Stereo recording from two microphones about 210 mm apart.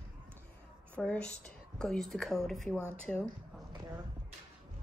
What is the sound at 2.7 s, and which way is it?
Speech, 10° right (ahead or behind).